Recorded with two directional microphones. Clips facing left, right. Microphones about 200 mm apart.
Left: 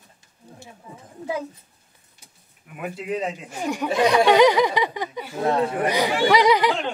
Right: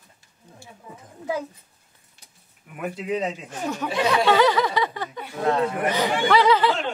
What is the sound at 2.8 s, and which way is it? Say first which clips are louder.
Speech: right 1 dB; 10° left (ahead or behind).